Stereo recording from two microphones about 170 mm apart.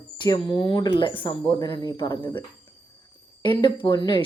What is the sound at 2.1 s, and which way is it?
Speech, 15° left (ahead or behind).